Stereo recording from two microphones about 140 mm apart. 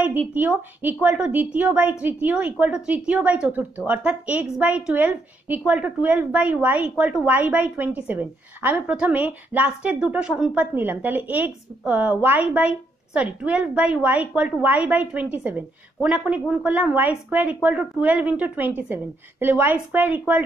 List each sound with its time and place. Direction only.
0.3 s a woman's voice: 10° right (ahead or behind)